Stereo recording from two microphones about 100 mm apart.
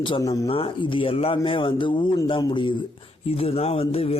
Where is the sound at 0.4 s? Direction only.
65° left (ahead or behind).